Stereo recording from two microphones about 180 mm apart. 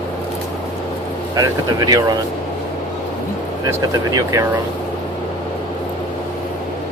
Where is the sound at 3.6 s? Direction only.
20° right (ahead or behind).